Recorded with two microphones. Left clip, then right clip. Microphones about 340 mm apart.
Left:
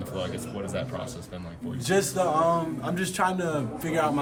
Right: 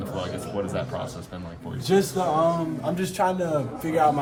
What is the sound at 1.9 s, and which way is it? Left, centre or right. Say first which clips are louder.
Speech: right 2 dB; left.